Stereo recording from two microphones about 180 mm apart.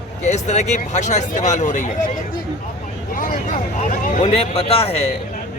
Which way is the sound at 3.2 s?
55° left (ahead or behind).